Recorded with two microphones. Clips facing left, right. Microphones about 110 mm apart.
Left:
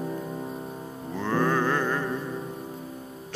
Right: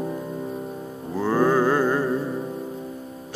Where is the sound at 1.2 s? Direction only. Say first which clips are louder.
Right 5 dB; 10° right (ahead or behind).